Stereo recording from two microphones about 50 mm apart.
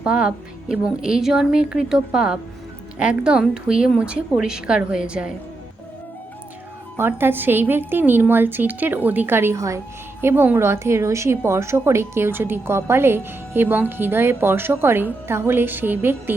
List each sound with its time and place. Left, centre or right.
0.0 s speech: right
6.9 s a woman's voice: right
9.6 s a woman's voice: right
10.2 s a woman's voice: right
10.6 s a woman's voice: right
12.3 s a woman's voice: right